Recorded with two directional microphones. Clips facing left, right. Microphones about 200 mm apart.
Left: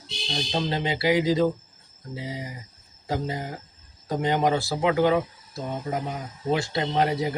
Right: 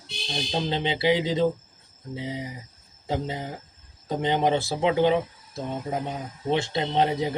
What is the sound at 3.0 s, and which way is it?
Speech, 20° right (ahead or behind).